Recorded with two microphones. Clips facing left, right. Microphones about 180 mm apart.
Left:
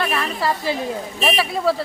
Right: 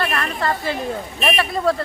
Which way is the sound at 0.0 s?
5° left (ahead or behind).